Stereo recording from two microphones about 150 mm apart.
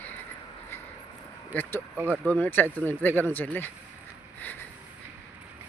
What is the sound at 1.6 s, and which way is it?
Speech, 15° left (ahead or behind).